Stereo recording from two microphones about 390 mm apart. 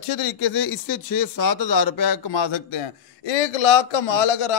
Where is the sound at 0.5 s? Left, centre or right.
Left.